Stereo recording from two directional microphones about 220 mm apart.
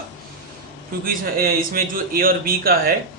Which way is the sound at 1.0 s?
40° right (ahead or behind).